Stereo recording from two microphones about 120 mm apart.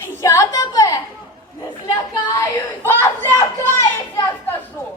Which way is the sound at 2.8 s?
20° left (ahead or behind).